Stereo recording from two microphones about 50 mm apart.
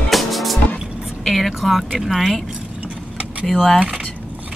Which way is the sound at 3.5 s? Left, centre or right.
Centre.